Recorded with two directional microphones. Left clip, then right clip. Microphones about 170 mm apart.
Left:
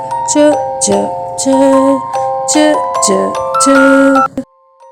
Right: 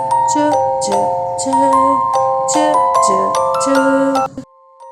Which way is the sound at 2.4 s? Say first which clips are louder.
Left 4 dB; 35° left (ahead or behind).